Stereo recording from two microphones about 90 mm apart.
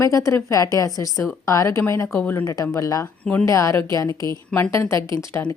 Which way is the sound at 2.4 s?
40° left (ahead or behind).